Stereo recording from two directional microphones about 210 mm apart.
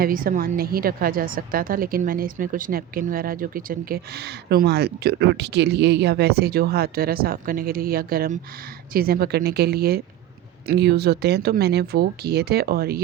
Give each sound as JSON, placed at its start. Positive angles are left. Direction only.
{"t": 0.0, "sound": "a woman's voice", "side_deg": -40}